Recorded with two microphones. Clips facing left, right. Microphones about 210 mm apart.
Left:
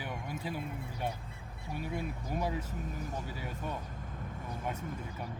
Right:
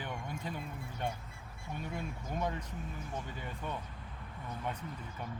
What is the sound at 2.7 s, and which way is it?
Speech, 40° left (ahead or behind).